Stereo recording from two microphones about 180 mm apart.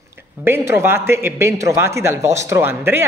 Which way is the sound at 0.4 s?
15° right (ahead or behind).